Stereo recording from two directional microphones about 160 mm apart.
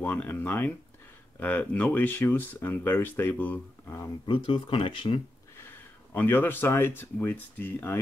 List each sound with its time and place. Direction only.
0.0 s speech: 10° left (ahead or behind)
4.3 s speech: 30° left (ahead or behind)
5.6 s speech: 15° left (ahead or behind)